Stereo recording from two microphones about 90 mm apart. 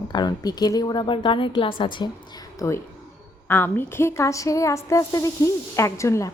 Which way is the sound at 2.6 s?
40° left (ahead or behind).